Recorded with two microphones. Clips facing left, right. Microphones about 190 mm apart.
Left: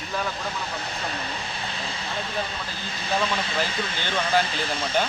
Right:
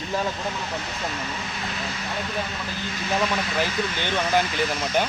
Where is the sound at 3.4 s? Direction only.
30° left (ahead or behind).